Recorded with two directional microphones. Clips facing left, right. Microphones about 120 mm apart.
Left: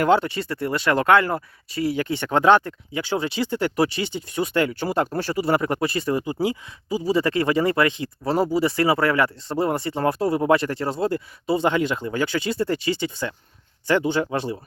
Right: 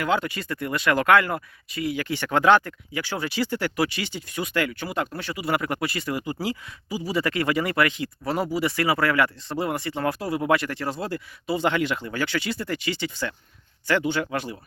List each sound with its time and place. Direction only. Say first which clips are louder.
0.0 s speech: left 6 dB; 30° left (ahead or behind)